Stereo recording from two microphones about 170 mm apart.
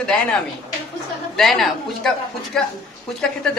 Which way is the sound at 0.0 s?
5° left (ahead or behind).